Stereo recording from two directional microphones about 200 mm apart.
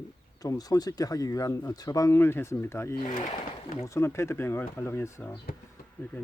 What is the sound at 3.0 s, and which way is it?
Speech, 40° left (ahead or behind).